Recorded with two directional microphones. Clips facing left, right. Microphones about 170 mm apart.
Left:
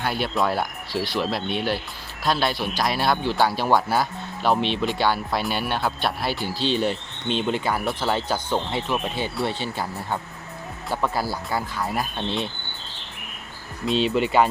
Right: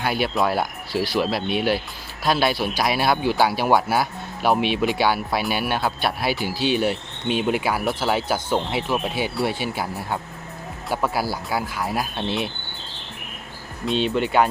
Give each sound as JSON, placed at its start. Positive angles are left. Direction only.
{"t": 0.0, "sound": "speech", "side_deg": -5}
{"t": 13.8, "sound": "speech", "side_deg": 0}